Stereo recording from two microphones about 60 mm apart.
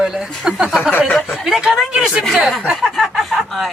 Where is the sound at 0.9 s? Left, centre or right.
Left.